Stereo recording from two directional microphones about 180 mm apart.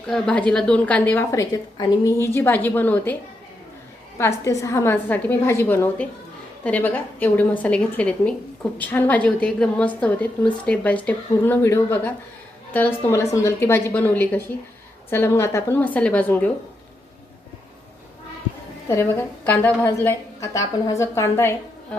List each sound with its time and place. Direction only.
0.1 s a woman's voice: 5° left (ahead or behind)
4.2 s a woman's voice: 15° left (ahead or behind)
18.9 s a woman's voice: 15° left (ahead or behind)